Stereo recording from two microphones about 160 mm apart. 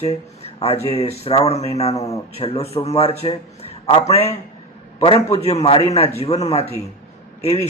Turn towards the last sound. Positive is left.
turn(degrees=40)  # may be behind; listen again after turning